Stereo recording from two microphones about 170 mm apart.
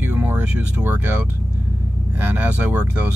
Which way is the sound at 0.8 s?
10° right (ahead or behind).